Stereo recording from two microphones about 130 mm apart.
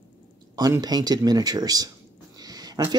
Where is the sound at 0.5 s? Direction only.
30° right (ahead or behind).